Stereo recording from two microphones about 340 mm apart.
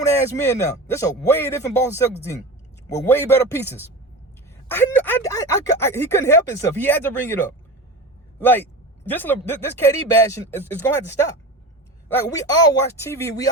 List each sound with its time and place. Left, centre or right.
0.0 s speech: centre
8.4 s speech: centre